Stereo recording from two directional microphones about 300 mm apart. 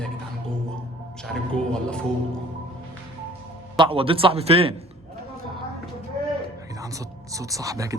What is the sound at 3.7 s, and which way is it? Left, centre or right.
A man's voice, centre.